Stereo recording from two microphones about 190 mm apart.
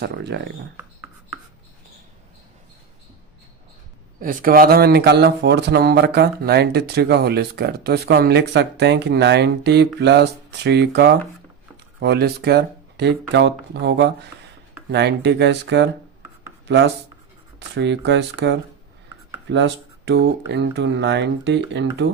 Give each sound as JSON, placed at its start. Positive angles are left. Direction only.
{"t": 0.0, "sound": "speech", "side_deg": -60}
{"t": 4.2, "sound": "speech", "side_deg": -45}